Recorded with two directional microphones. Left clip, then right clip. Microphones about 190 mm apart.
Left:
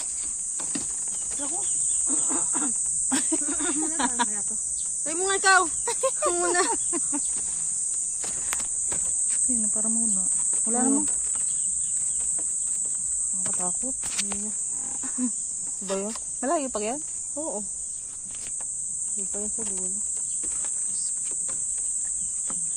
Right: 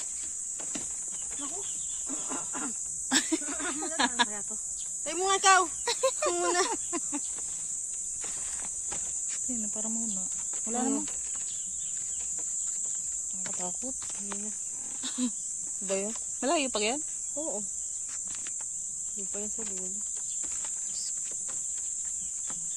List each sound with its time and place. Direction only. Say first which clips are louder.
2.0 s cricket: left 8 dB; 15° right (ahead or behind)
3.1 s a sound: right 1 dB; 35° right (ahead or behind)
3.5 s snake: left 5 dB; 25° right (ahead or behind)
5.0 s speech: left 1 dB; 25° right (ahead or behind)
9.5 s speech: left 6 dB; 15° right (ahead or behind)
15.9 s speech: left 2 dB; 20° right (ahead or behind)
16.4 s cricket: left 1 dB; 40° right (ahead or behind)
17.3 s speech: left 3 dB; 15° right (ahead or behind)